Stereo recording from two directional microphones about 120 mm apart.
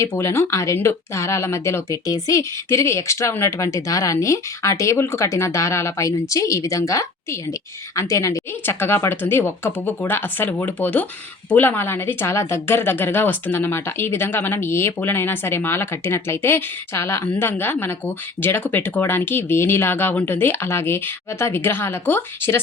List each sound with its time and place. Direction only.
0.0 s a woman's voice: 20° left (ahead or behind)